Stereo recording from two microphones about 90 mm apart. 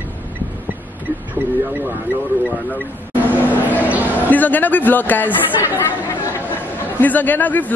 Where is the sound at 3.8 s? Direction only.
20° right (ahead or behind).